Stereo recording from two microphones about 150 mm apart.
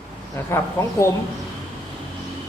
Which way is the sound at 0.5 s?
20° left (ahead or behind).